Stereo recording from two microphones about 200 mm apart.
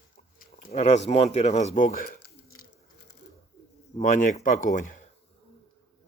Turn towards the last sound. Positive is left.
turn(degrees=40)  # may be behind; listen again after turning